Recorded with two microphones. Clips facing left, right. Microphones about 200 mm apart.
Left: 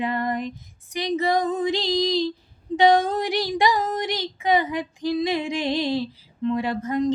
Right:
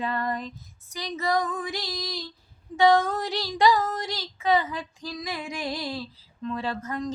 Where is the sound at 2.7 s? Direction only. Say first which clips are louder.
Left 3 dB; 15° left (ahead or behind).